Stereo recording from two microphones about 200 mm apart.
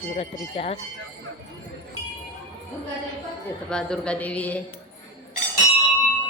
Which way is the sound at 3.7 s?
5° left (ahead or behind).